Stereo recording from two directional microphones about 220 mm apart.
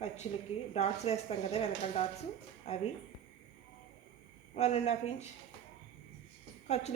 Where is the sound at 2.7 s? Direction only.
30° left (ahead or behind).